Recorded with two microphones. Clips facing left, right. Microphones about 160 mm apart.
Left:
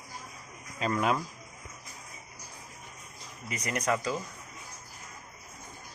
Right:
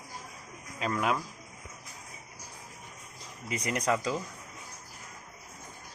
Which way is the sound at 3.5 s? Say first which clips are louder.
Right 2 dB; 25° right (ahead or behind).